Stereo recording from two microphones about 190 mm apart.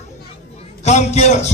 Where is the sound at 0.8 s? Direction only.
35° left (ahead or behind).